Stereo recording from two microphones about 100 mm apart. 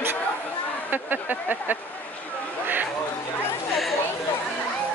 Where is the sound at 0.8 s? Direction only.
20° right (ahead or behind).